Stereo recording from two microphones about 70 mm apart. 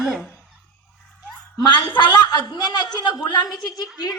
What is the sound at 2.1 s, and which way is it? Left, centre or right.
A woman's voice, left.